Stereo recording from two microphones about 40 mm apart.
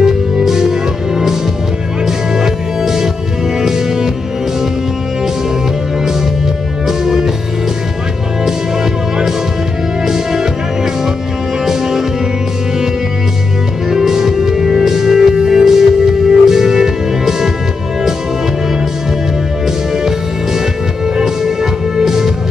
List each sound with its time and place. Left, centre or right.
0.0 s music: centre
6.9 s music: centre
10.0 s music: centre
11.6 s music: centre
13.8 s music: centre
21.2 s music: centre